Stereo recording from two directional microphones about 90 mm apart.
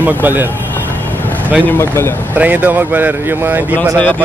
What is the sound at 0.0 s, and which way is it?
Speech, 20° right (ahead or behind).